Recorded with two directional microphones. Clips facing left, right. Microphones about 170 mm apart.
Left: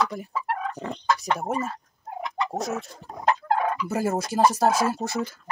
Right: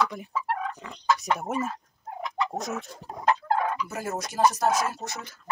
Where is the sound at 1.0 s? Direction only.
5° right (ahead or behind).